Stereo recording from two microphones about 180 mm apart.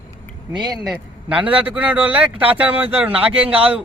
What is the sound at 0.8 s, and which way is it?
A man's voice, 10° right (ahead or behind).